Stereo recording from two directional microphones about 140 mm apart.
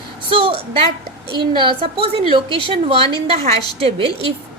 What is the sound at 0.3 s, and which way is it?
A woman's voice, 40° right (ahead or behind).